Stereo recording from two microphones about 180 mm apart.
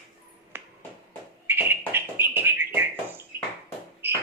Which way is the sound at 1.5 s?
10° right (ahead or behind).